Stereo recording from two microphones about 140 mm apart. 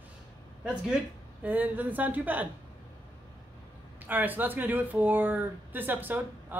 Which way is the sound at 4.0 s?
15° right (ahead or behind).